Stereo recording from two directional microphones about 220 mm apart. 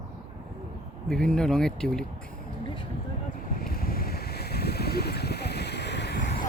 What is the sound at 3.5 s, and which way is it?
Boat, 40° left (ahead or behind).